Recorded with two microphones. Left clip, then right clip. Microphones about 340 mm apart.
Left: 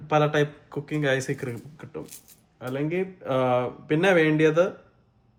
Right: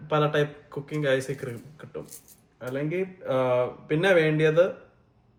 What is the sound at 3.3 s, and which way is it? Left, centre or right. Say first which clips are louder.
A man's voice: left 1 dB; left.